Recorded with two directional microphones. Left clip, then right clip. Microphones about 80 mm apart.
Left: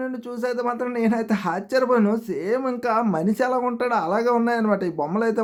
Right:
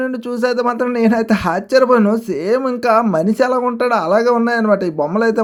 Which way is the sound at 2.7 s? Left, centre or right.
Right.